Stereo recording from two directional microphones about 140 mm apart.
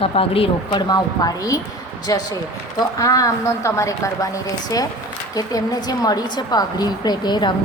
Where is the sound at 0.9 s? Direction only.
25° left (ahead or behind).